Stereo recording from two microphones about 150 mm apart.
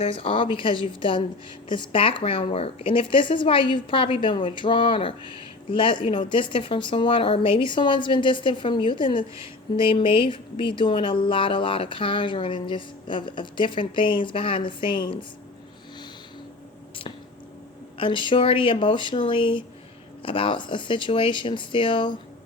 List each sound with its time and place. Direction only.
0.0 s speech: 40° left (ahead or behind)
17.9 s speech: 35° left (ahead or behind)